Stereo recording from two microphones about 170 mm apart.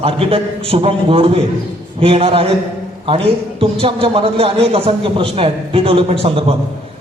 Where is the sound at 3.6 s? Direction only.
30° right (ahead or behind).